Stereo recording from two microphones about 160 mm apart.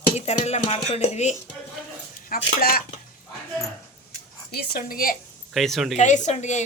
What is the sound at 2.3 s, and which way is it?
Speech, 70° left (ahead or behind).